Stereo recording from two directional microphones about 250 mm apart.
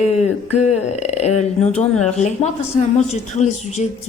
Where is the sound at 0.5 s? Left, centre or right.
Left.